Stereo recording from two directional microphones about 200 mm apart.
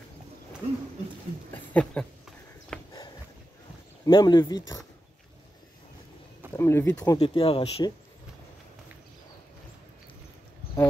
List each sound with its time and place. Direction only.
1.5 s speech: 5° left (ahead or behind)
2.7 s dog: 5° left (ahead or behind)
4.0 s speech: 20° left (ahead or behind)
6.5 s speech: 15° left (ahead or behind)
7.2 s speech: 30° left (ahead or behind)